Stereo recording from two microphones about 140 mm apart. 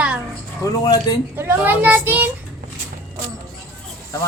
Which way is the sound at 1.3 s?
15° right (ahead or behind).